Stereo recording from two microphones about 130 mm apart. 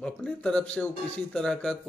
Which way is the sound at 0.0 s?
5° left (ahead or behind).